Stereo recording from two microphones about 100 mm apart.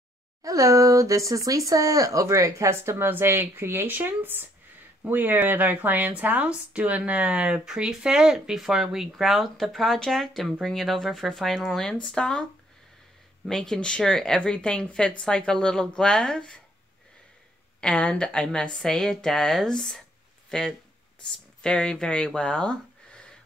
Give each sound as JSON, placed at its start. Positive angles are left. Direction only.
{"t": 0.4, "sound": "speech", "side_deg": -35}
{"t": 13.5, "sound": "speech", "side_deg": 5}
{"t": 17.7, "sound": "speech", "side_deg": 10}